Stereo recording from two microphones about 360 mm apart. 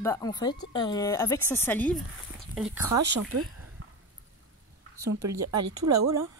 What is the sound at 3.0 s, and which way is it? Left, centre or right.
Speech, right.